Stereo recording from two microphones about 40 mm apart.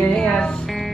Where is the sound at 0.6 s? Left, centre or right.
Centre.